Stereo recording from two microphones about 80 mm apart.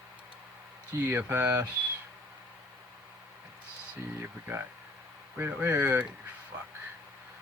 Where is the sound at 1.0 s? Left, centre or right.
Right.